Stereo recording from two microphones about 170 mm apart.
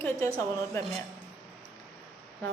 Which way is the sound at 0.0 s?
15° left (ahead or behind).